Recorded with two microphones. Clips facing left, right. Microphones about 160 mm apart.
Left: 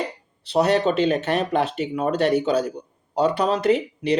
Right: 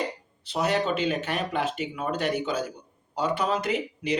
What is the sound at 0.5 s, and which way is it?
Speech, 40° left (ahead or behind).